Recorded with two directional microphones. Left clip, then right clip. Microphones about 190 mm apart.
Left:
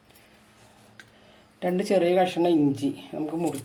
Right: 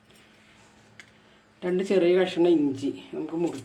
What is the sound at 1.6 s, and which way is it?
Speech, 45° left (ahead or behind).